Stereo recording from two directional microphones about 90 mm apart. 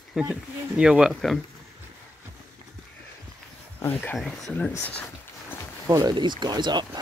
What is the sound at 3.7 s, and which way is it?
Speech, 25° left (ahead or behind).